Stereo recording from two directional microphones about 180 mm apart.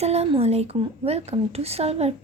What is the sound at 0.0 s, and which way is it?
A woman's voice, 35° right (ahead or behind).